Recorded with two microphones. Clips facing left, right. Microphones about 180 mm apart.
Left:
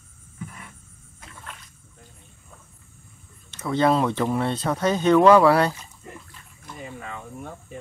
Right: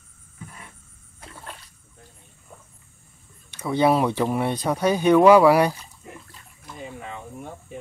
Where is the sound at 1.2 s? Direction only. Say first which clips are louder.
Right 3 dB; 35° right (ahead or behind).